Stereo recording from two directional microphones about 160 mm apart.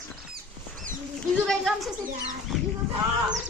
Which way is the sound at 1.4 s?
Centre (ahead or behind).